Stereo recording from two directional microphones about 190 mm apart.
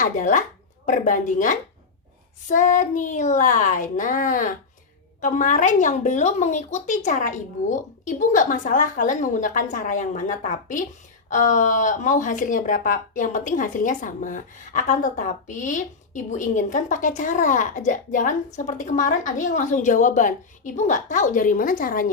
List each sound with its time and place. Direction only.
0.0 s a woman's voice: 40° left (ahead or behind)